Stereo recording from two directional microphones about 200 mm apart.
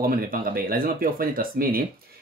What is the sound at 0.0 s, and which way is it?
Speech, 45° right (ahead or behind).